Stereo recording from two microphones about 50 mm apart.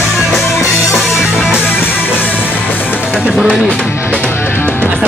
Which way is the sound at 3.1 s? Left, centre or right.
Right.